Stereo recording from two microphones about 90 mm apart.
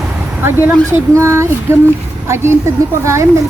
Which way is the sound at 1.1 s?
30° right (ahead or behind).